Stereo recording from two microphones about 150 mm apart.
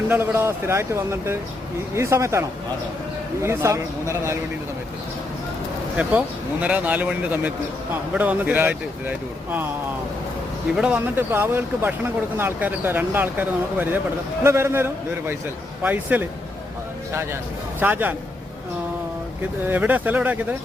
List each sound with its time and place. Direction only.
0.1 s speech: 15° right (ahead or behind)
3.4 s speech: 20° right (ahead or behind)
6.0 s speech: 10° right (ahead or behind)
10.8 s speech: 5° right (ahead or behind)
17.7 s speech: 10° right (ahead or behind)
19.6 s speech: 10° right (ahead or behind)